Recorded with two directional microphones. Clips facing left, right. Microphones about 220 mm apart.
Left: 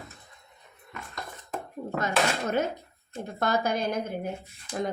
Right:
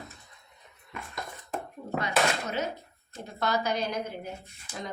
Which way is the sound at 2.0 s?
50° left (ahead or behind).